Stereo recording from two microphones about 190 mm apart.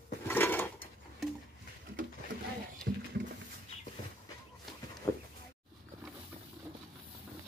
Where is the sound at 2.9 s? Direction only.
55° right (ahead or behind).